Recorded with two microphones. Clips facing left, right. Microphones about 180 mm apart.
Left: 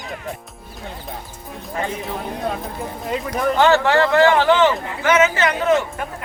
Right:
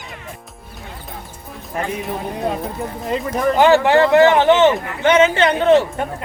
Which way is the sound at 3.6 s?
15° right (ahead or behind).